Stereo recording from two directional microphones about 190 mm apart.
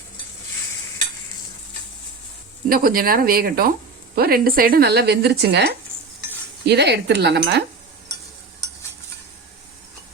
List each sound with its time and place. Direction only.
2.6 s speech: 50° right (ahead or behind)